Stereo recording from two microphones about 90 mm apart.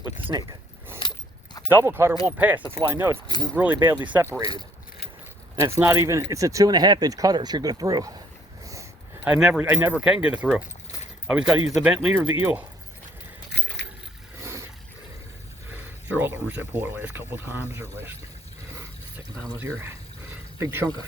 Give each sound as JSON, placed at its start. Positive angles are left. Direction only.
{"t": 0.3, "sound": "speech", "side_deg": -30}
{"t": 1.6, "sound": "speech", "side_deg": -25}
{"t": 2.2, "sound": "speech", "side_deg": -15}
{"t": 3.2, "sound": "speech", "side_deg": 55}
{"t": 3.5, "sound": "speech", "side_deg": -20}
{"t": 4.4, "sound": "speech", "side_deg": -45}
{"t": 5.5, "sound": "speech", "side_deg": -35}
{"t": 8.6, "sound": "a sound", "side_deg": -35}
{"t": 9.2, "sound": "speech", "side_deg": -10}
{"t": 16.0, "sound": "speech", "side_deg": -25}
{"t": 20.6, "sound": "speech", "side_deg": -30}